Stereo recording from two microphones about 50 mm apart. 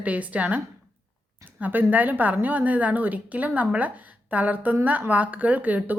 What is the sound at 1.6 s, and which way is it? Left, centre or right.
A woman's voice, right.